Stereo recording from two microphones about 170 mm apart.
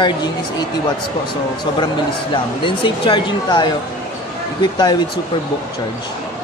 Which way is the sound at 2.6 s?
30° left (ahead or behind).